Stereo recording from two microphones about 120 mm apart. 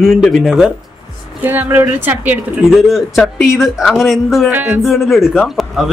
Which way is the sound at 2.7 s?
5° right (ahead or behind).